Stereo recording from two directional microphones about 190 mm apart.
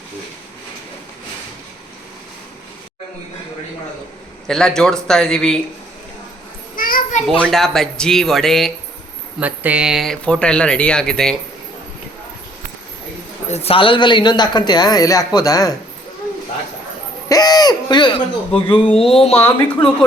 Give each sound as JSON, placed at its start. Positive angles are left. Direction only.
{"t": 4.4, "sound": "speech", "side_deg": 5}
{"t": 6.7, "sound": "children playing", "side_deg": 45}
{"t": 7.3, "sound": "speech", "side_deg": 5}
{"t": 13.5, "sound": "a man's voice", "side_deg": 30}
{"t": 17.2, "sound": "a man's voice", "side_deg": 20}
{"t": 19.4, "sound": "speech", "side_deg": 10}